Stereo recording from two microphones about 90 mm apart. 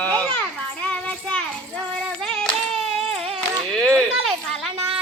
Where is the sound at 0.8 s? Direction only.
15° left (ahead or behind).